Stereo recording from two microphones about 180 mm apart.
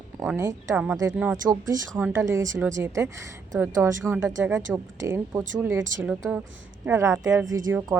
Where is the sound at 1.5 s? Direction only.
20° right (ahead or behind).